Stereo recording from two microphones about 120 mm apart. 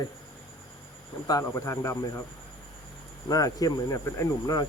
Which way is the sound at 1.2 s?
25° left (ahead or behind).